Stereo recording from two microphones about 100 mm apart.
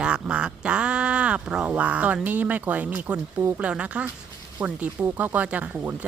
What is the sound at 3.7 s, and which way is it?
Speech, 10° right (ahead or behind).